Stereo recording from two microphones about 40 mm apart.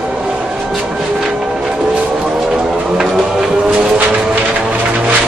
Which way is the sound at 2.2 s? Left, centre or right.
Centre.